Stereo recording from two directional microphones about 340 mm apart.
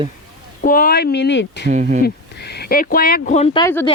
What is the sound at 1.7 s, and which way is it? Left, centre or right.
Speech, right.